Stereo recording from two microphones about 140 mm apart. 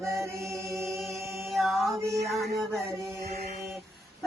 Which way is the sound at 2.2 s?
Centre (ahead or behind).